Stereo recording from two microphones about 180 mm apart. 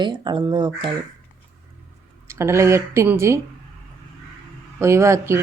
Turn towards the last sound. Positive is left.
turn(degrees=-15)  # may be behind; listen again after turning